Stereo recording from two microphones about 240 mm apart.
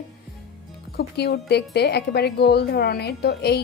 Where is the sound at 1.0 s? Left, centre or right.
Left.